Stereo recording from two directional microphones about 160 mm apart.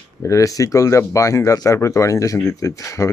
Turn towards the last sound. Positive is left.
turn(degrees=20)  # may be behind; listen again after turning